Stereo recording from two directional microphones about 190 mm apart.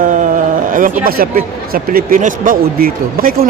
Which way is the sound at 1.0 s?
50° right (ahead or behind).